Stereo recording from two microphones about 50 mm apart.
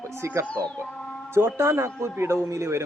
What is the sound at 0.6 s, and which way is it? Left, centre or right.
Speech, right.